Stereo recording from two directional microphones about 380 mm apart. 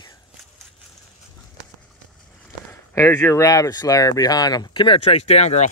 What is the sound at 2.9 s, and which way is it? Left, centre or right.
Speech, centre.